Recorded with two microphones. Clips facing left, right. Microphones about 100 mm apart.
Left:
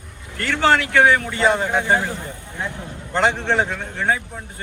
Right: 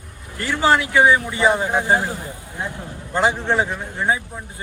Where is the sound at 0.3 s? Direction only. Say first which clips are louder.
Even; 15° right (ahead or behind).